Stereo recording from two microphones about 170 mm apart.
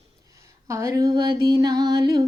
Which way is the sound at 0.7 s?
15° right (ahead or behind).